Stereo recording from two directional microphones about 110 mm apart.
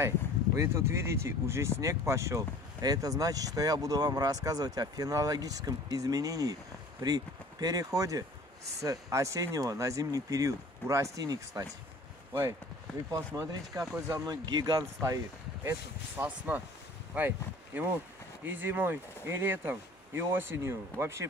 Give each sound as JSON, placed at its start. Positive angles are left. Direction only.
{"t": 0.6, "sound": "speech", "side_deg": -25}
{"t": 13.1, "sound": "speech", "side_deg": -30}
{"t": 16.2, "sound": "speech", "side_deg": -15}